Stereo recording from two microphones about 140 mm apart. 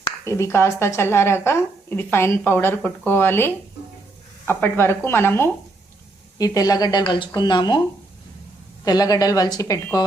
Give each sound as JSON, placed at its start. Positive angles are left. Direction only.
{"t": 0.3, "sound": "a woman's voice", "side_deg": 20}
{"t": 8.8, "sound": "a woman's voice", "side_deg": 25}